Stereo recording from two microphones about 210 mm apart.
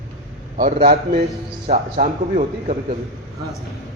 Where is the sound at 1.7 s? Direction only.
35° right (ahead or behind).